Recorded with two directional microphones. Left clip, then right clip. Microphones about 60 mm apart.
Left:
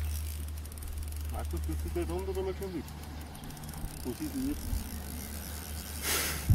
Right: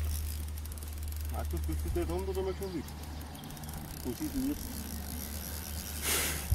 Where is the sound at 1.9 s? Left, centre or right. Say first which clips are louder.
Even; centre.